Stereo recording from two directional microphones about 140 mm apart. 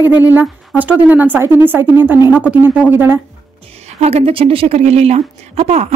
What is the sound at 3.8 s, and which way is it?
A woman's voice, 50° right (ahead or behind).